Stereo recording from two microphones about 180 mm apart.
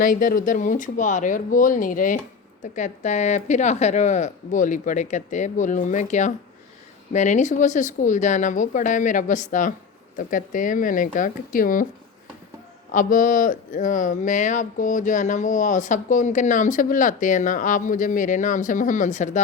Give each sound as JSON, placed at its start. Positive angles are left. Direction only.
{"t": 0.0, "sound": "speech", "side_deg": 50}
{"t": 12.9, "sound": "speech", "side_deg": 45}